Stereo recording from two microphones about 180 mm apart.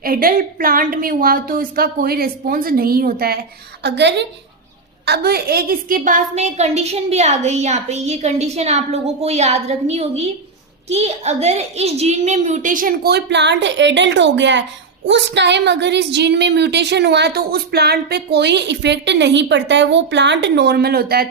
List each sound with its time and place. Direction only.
0.0 s a child's voice: 55° right (ahead or behind)
3.8 s a woman's voice: 75° right (ahead or behind)
5.0 s a woman's voice: 60° right (ahead or behind)